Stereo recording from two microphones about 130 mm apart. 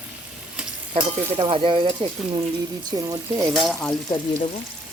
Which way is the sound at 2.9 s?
30° right (ahead or behind).